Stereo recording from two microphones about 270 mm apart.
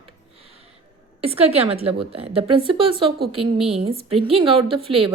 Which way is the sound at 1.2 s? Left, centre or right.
Right.